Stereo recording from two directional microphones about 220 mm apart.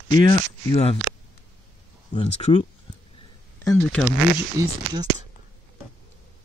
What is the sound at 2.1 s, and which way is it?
Speech, 25° left (ahead or behind).